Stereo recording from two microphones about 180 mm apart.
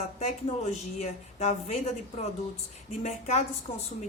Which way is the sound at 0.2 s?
40° left (ahead or behind).